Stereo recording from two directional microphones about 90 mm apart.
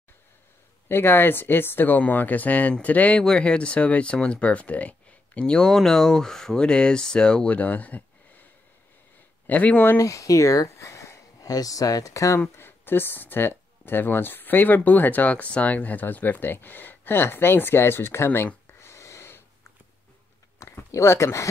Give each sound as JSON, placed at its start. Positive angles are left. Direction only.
{"t": 0.8, "sound": "speech", "side_deg": 25}
{"t": 9.5, "sound": "speech", "side_deg": 20}
{"t": 9.9, "sound": "speech", "side_deg": 35}
{"t": 12.4, "sound": "speech", "side_deg": 25}
{"t": 20.5, "sound": "a sound", "side_deg": 30}